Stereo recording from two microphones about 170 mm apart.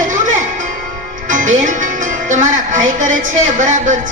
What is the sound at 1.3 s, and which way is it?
Music, 50° right (ahead or behind).